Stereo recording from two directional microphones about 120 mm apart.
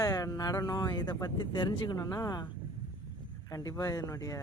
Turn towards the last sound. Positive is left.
turn(degrees=30)  # may be behind; listen again after turning